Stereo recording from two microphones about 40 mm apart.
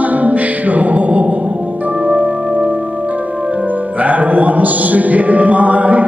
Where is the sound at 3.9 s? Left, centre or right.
Right.